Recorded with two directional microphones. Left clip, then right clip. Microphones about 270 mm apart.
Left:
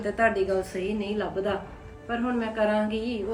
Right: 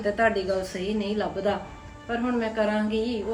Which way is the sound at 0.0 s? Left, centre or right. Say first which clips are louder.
Right 1 dB; centre.